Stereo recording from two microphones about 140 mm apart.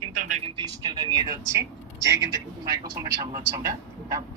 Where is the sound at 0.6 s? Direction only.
30° right (ahead or behind).